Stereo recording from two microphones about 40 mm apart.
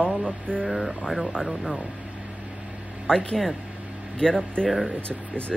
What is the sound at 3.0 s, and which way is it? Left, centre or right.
Speech, left.